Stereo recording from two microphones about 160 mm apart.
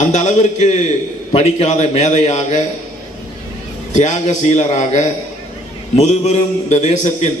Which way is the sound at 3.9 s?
50° left (ahead or behind).